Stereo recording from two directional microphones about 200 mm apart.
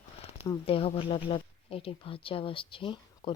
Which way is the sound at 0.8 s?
30° left (ahead or behind).